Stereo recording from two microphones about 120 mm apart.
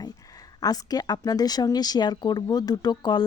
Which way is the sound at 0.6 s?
30° left (ahead or behind).